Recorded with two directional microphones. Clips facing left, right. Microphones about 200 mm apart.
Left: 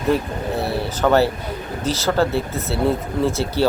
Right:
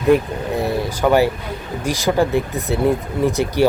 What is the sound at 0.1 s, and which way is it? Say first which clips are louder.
Speech: right 5 dB; 15° right (ahead or behind).